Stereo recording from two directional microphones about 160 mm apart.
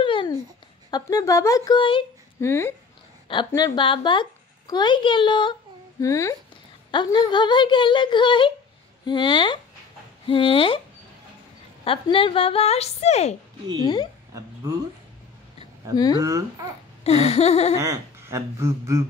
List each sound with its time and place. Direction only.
0.0 s babbling: 30° left (ahead or behind)
0.8 s speech: 25° left (ahead or behind)
2.4 s speech: 15° left (ahead or behind)
3.3 s a woman's voice: 25° left (ahead or behind)
11.8 s speech: 35° left (ahead or behind)
16.2 s speech: 20° right (ahead or behind)
17.0 s speech: 40° left (ahead or behind)
17.7 s speech: 20° right (ahead or behind)